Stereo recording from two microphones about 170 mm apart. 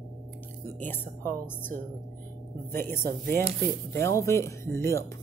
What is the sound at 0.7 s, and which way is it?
Speech, 10° left (ahead or behind).